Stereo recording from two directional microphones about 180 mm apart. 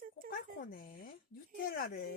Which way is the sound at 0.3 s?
55° left (ahead or behind).